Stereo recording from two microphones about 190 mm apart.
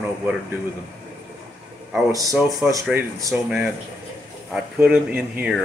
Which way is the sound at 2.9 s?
5° right (ahead or behind).